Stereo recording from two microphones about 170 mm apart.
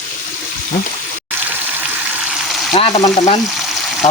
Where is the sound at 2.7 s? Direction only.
40° left (ahead or behind).